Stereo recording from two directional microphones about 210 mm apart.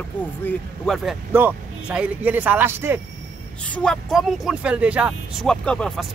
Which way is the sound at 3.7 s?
5° left (ahead or behind).